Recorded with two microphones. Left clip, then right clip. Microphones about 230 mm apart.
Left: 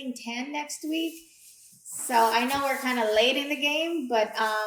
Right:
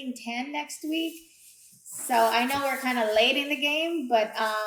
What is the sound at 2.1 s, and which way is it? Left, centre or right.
A woman's voice, right.